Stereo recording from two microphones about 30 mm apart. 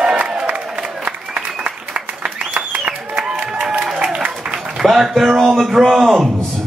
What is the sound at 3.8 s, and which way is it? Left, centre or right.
Applause, right.